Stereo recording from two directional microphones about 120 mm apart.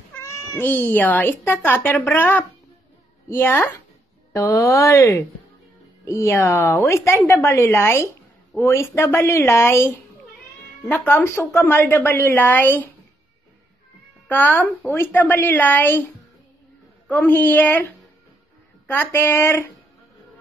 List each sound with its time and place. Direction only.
0.1 s a woman's voice: 25° left (ahead or behind)
14.2 s a woman's voice: 15° left (ahead or behind)
17.2 s a woman's voice: 15° left (ahead or behind)